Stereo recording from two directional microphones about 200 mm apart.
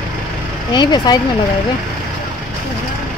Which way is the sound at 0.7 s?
20° left (ahead or behind).